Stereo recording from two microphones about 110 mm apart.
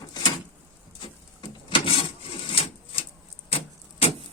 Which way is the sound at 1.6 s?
55° left (ahead or behind).